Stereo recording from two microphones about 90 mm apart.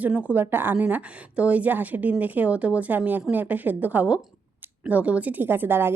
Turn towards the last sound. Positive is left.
turn(degrees=-25)  # may be behind; listen again after turning